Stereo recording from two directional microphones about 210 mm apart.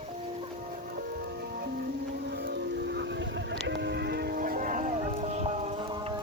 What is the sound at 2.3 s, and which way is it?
Music, 50° right (ahead or behind).